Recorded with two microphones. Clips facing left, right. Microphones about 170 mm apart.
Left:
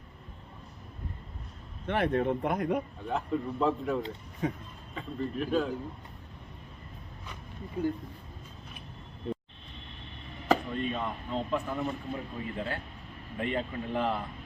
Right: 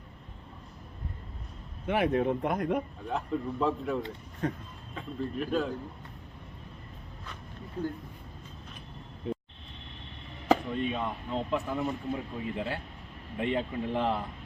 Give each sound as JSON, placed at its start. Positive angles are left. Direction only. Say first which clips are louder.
{"t": 1.9, "sound": "speech", "louder": "right 1 dB", "side_deg": -5}
{"t": 9.2, "sound": "vehicle", "louder": "right 1 dB", "side_deg": 0}
{"t": 10.5, "sound": "speech", "louder": "right 1 dB", "side_deg": -10}